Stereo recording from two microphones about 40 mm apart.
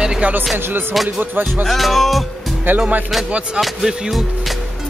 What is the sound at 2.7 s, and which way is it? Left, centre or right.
Speech, right.